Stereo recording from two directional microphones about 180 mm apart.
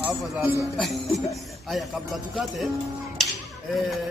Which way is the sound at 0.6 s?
Centre (ahead or behind).